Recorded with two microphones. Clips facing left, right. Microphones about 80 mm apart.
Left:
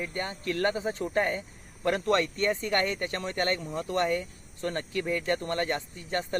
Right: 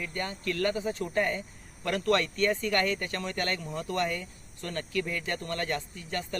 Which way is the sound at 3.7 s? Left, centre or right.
Centre.